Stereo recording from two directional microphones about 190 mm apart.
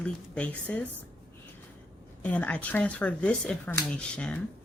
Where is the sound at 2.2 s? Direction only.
5° left (ahead or behind).